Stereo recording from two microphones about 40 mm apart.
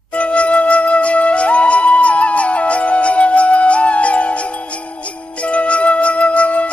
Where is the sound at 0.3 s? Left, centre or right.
Left.